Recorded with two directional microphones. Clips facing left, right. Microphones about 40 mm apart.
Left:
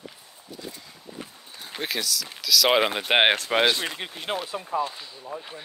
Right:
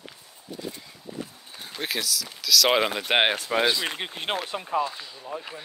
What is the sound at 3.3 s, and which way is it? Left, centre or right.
Speech, left.